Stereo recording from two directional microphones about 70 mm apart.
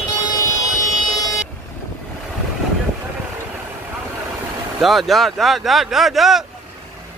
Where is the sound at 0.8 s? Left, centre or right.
Left.